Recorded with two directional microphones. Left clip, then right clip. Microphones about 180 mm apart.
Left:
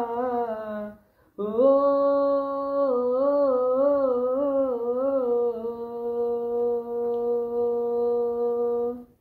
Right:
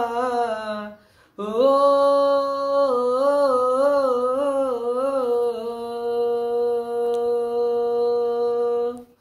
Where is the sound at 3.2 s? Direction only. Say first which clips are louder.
Right 4 dB; 35° right (ahead or behind).